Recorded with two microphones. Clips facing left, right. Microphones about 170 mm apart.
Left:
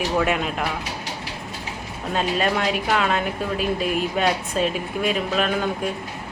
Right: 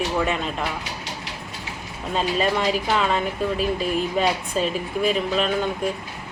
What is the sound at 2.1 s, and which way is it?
Speech, centre (ahead or behind).